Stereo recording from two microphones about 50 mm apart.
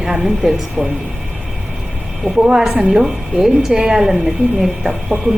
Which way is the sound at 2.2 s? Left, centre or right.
Centre.